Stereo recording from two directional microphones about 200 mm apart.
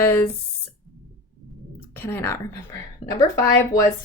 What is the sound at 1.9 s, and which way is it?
Speech, 10° left (ahead or behind).